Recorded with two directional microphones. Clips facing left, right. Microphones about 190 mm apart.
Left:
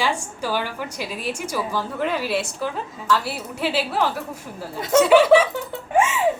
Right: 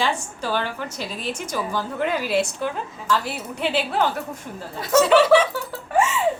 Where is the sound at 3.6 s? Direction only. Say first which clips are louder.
Even; 5° left (ahead or behind).